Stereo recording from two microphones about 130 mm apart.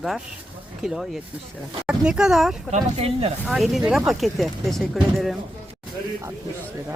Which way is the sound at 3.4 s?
Centre (ahead or behind).